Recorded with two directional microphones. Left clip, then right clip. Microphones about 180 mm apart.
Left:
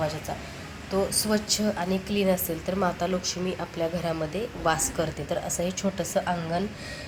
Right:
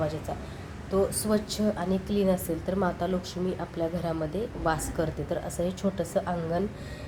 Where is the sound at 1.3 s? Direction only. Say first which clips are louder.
Left 2 dB; 5° right (ahead or behind).